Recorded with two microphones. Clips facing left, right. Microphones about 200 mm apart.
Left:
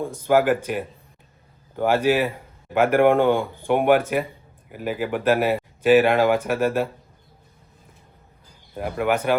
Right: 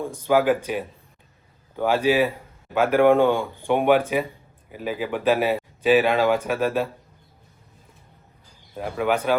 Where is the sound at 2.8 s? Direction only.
15° left (ahead or behind).